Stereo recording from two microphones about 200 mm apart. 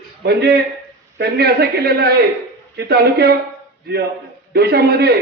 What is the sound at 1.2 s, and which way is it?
A man's voice, 55° right (ahead or behind).